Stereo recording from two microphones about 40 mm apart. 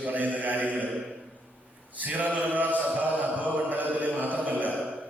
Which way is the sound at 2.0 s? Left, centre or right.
Right.